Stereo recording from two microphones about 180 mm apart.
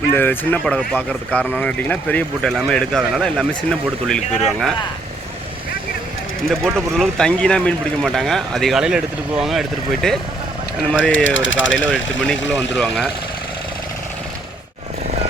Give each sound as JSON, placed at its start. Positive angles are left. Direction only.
{"t": 0.1, "sound": "speech", "side_deg": 10}
{"t": 6.5, "sound": "speech", "side_deg": 0}
{"t": 11.3, "sound": "speech", "side_deg": 90}
{"t": 12.5, "sound": "speech", "side_deg": 5}